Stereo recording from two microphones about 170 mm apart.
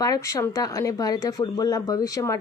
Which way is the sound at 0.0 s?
20° left (ahead or behind).